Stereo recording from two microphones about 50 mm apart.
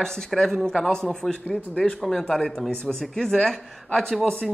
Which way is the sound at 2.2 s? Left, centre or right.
Centre.